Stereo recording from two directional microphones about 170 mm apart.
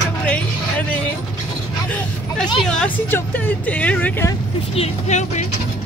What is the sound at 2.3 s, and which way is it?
Speech, 5° left (ahead or behind).